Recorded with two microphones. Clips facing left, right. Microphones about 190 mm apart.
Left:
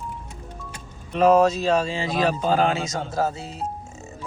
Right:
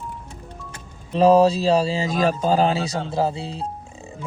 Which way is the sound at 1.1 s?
35° right (ahead or behind).